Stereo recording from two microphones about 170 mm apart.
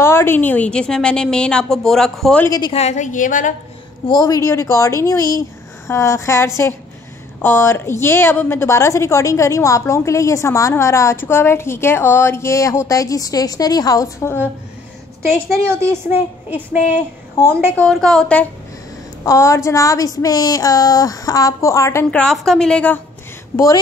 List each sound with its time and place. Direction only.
0.0 s a woman's voice: 15° left (ahead or behind)
2.4 s a woman's voice: 20° left (ahead or behind)
2.7 s a woman's voice: 40° left (ahead or behind)
4.1 s a woman's voice: 20° left (ahead or behind)
16.1 s speech: 10° right (ahead or behind)
17.7 s a woman's voice: 5° left (ahead or behind)
19.2 s a woman's voice: 15° left (ahead or behind)
22.1 s a woman's voice: 5° left (ahead or behind)
23.5 s a woman's voice: 20° left (ahead or behind)